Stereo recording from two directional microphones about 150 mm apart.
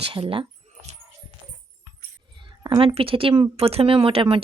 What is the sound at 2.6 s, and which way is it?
Speech, 30° right (ahead or behind).